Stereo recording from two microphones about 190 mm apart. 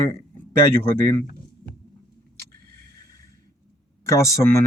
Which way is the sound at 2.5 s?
50° right (ahead or behind).